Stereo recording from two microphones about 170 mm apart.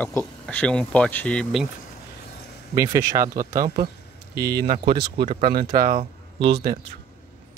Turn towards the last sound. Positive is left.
turn(degrees=-75)  # may be behind; listen again after turning